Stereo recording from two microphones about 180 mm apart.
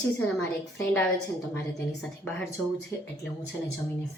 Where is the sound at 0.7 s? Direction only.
10° left (ahead or behind).